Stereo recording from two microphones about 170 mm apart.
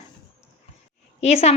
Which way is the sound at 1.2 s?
40° left (ahead or behind).